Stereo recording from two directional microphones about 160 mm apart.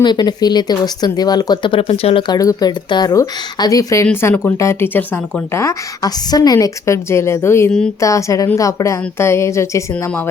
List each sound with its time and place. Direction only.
0.0 s speech: 25° left (ahead or behind)